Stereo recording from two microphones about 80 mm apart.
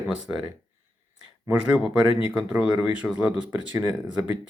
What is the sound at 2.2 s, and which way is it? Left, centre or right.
Speech, centre.